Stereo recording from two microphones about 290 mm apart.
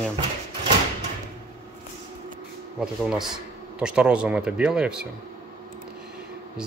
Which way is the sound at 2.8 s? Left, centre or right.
Centre.